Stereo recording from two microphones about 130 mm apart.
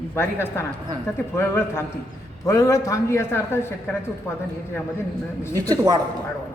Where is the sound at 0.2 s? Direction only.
20° left (ahead or behind).